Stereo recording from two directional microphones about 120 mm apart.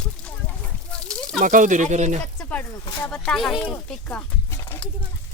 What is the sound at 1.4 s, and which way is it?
Speech, 90° right.